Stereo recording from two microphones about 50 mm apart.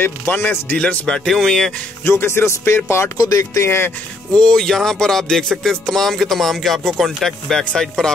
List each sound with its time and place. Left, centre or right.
0.0 s speech: left
1.0 s music: centre
2.0 s speech: left
4.3 s music: centre